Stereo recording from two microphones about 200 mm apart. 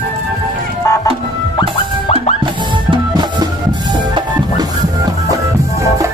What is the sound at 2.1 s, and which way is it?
Music, 30° left (ahead or behind).